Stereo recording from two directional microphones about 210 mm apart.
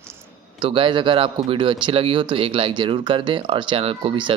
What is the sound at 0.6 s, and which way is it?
Speech, 25° right (ahead or behind).